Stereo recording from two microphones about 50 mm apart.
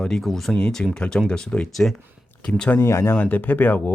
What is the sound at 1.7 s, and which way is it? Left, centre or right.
Speech, centre.